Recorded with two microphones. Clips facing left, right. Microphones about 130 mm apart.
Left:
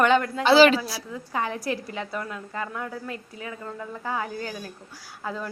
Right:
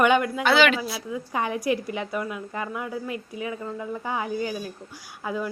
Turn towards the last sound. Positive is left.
turn(degrees=-10)  # may be behind; listen again after turning